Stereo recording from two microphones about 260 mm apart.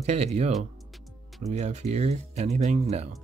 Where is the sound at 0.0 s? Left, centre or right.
Right.